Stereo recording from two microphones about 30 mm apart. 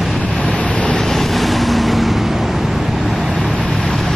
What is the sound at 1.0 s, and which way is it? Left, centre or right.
Vehicle, centre.